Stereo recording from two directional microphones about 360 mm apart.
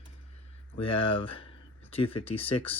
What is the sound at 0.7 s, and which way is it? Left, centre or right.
Speech, centre.